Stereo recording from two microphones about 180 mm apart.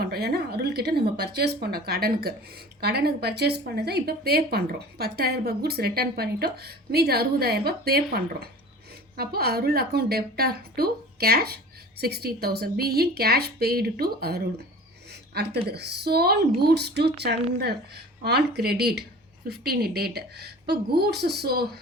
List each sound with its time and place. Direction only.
0.0 s speech: 60° right (ahead or behind)
15.1 s a sound: 65° right (ahead or behind)
15.7 s speech: 65° right (ahead or behind)